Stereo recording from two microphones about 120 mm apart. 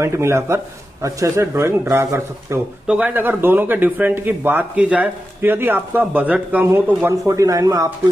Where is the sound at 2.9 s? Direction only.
10° right (ahead or behind).